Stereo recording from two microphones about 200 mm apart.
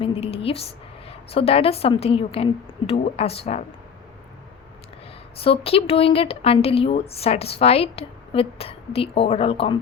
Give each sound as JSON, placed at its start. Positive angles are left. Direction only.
{"t": 0.0, "sound": "a woman's voice", "side_deg": 30}
{"t": 5.4, "sound": "a woman's voice", "side_deg": 30}